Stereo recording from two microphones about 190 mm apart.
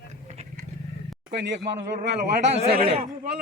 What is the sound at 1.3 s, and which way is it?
Speech, 65° right (ahead or behind).